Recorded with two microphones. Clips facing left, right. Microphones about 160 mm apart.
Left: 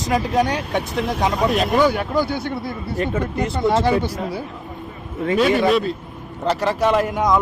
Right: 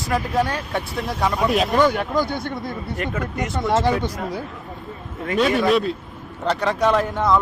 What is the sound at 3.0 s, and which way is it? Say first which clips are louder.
Speech: left 5 dB; 30° left (ahead or behind).